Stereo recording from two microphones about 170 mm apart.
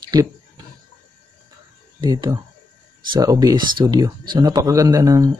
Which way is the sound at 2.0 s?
25° right (ahead or behind).